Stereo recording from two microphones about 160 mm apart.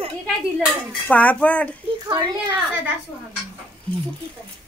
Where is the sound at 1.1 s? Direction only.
10° left (ahead or behind).